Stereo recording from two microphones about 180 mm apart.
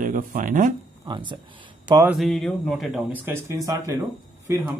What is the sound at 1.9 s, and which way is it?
Speech, 15° right (ahead or behind).